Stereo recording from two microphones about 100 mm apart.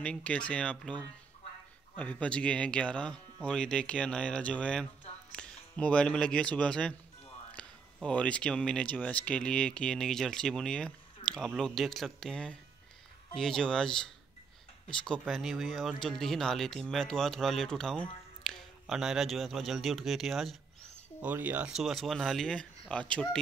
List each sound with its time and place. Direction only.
0.0 s speech: 15° left (ahead or behind)
2.0 s speech: 15° left (ahead or behind)
15.2 s speech: centre (ahead or behind)
21.2 s speech: 15° right (ahead or behind)
21.7 s speech: centre (ahead or behind)